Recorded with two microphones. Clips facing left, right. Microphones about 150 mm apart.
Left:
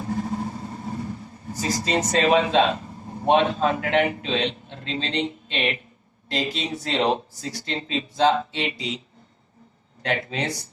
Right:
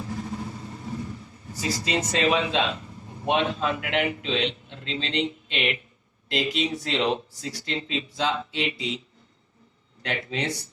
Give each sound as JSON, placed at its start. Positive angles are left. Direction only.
{"t": 0.0, "sound": "vehicle", "side_deg": 45}
{"t": 6.3, "sound": "speech", "side_deg": 40}
{"t": 10.0, "sound": "speech", "side_deg": 40}